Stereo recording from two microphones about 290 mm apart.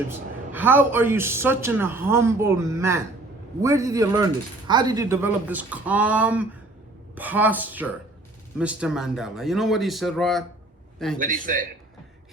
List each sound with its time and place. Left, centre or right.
0.1 s a man's voice: centre